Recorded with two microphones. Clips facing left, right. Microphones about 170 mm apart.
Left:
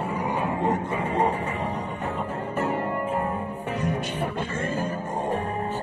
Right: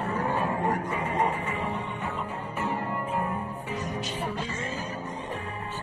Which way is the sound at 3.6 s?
55° left (ahead or behind).